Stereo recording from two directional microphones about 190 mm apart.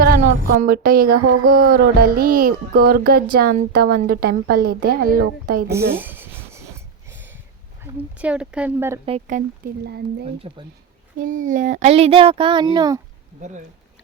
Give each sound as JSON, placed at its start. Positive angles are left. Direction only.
{"t": 0.6, "sound": "music", "side_deg": -50}
{"t": 5.9, "sound": "a sound", "side_deg": -10}
{"t": 8.2, "sound": "speech", "side_deg": -5}
{"t": 9.0, "sound": "speech", "side_deg": -40}
{"t": 9.8, "sound": "speech", "side_deg": -60}
{"t": 10.5, "sound": "speech", "side_deg": -30}
{"t": 11.3, "sound": "speech", "side_deg": -40}